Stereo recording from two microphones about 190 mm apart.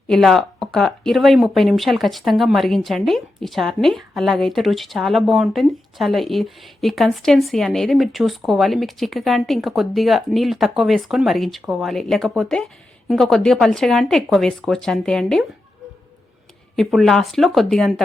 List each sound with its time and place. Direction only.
0.1 s speech: centre (ahead or behind)
16.7 s speech: centre (ahead or behind)